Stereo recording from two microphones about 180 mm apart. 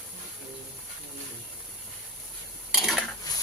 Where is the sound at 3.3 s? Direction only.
20° left (ahead or behind).